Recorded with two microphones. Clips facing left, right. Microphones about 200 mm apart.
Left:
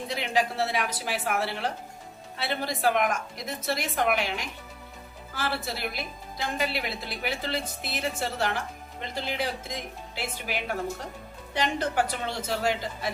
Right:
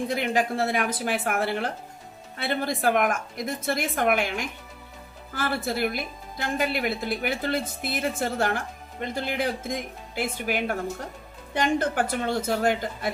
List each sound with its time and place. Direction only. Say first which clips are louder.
0.1 s a woman's voice: left 1 dB; 50° right (ahead or behind)